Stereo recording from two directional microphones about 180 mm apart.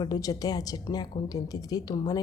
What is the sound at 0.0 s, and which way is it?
Speech, 20° left (ahead or behind).